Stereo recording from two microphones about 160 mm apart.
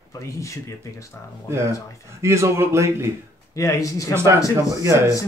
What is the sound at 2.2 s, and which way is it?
Speech, 15° right (ahead or behind).